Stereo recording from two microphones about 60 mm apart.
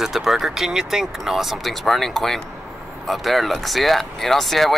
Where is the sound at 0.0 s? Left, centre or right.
Centre.